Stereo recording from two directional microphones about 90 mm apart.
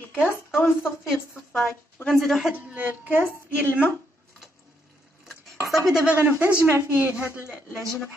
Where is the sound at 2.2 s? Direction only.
Centre (ahead or behind).